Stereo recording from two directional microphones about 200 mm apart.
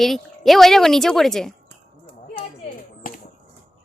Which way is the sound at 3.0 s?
45° left (ahead or behind).